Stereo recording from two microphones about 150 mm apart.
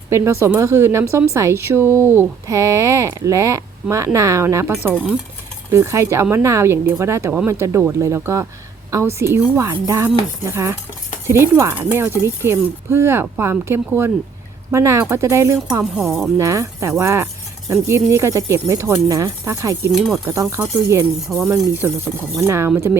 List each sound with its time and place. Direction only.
0.1 s speech: 20° right (ahead or behind)
4.9 s speech: 5° left (ahead or behind)
5.7 s speech: 20° right (ahead or behind)
15.8 s speech: centre (ahead or behind)
16.4 s speech: 20° right (ahead or behind)
19.9 s speech: centre (ahead or behind)
20.2 s speech: 20° right (ahead or behind)
21.2 s speech: centre (ahead or behind)
21.5 s speech: 15° right (ahead or behind)